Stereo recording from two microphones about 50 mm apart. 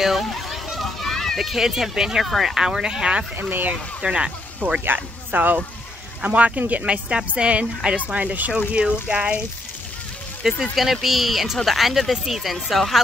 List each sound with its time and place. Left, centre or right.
0.0 s a sound: centre
1.4 s speech: centre
2.2 s speech: centre
2.5 s speech: centre
3.3 s speech: right
4.0 s speech: centre
4.8 s speech: right
8.5 s speech: centre
10.6 s speech: centre